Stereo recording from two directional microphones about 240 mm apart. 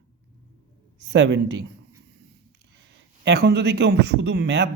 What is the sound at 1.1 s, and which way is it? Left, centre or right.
Speech, right.